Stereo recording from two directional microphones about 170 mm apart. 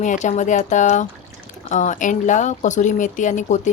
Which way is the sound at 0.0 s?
45° left (ahead or behind).